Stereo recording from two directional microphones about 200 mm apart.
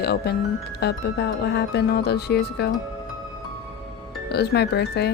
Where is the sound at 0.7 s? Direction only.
55° left (ahead or behind).